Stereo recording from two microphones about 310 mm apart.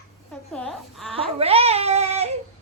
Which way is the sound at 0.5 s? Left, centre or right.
Centre.